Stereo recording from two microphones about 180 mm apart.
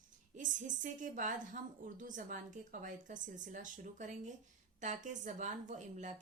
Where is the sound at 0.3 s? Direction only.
45° right (ahead or behind).